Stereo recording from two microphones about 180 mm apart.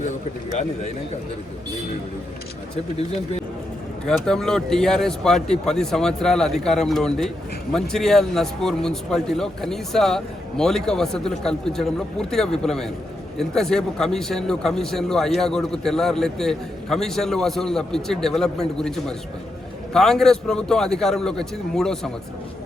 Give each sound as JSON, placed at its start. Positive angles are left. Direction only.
{"t": 4.0, "sound": "a man's voice", "side_deg": 5}